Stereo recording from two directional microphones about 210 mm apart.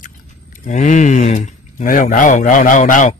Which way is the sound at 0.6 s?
35° left (ahead or behind).